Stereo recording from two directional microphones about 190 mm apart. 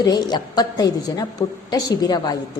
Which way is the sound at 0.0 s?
20° left (ahead or behind).